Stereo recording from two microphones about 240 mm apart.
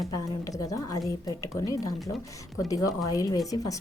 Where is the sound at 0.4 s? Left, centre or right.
Centre.